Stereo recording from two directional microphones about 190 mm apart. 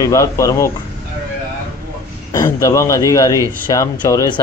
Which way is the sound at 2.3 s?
15° left (ahead or behind).